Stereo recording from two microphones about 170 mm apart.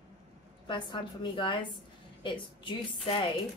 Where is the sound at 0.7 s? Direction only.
30° left (ahead or behind).